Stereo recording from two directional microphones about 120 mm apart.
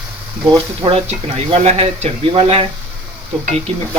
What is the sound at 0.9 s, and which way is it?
Speech, 60° right (ahead or behind).